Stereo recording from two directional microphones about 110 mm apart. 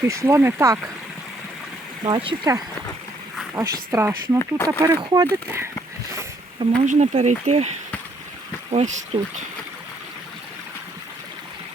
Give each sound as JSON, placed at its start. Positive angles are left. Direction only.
{"t": 0.0, "sound": "speech", "side_deg": -25}
{"t": 2.0, "sound": "speech", "side_deg": -45}
{"t": 3.5, "sound": "speech", "side_deg": -25}
{"t": 4.4, "sound": "speech", "side_deg": 20}
{"t": 4.9, "sound": "speech", "side_deg": -35}
{"t": 6.6, "sound": "speech", "side_deg": -45}
{"t": 6.9, "sound": "speech", "side_deg": -90}